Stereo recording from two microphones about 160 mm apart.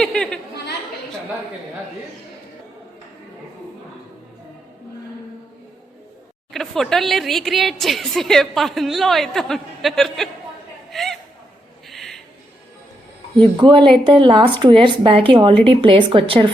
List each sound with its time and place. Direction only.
0.0 s chatter: 5° left (ahead or behind)
6.5 s speech: centre (ahead or behind)
10.9 s a sound: centre (ahead or behind)
13.3 s a woman's voice: 30° right (ahead or behind)